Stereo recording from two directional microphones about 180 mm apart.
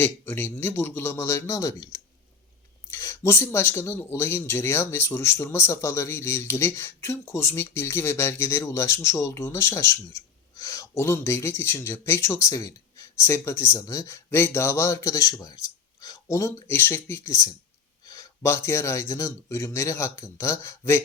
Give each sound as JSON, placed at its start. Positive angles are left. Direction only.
{"t": 0.0, "sound": "speech", "side_deg": 10}